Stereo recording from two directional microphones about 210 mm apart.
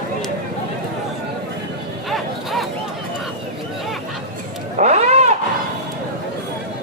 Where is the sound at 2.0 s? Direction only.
Centre (ahead or behind).